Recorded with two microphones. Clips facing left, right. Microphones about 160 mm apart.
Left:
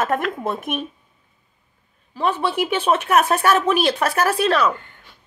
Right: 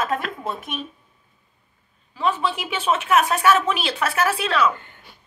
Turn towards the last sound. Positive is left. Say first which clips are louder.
# left 3 dB
turn(degrees=40)  # may be behind; listen again after turning